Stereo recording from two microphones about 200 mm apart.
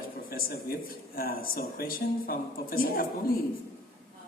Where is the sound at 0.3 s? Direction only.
50° left (ahead or behind).